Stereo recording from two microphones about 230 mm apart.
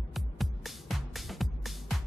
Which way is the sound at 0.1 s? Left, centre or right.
Centre.